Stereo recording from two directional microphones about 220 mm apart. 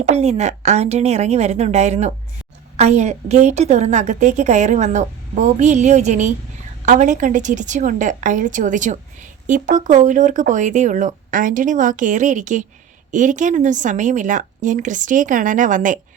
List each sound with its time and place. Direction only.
0.0 s a woman's voice: 30° right (ahead or behind)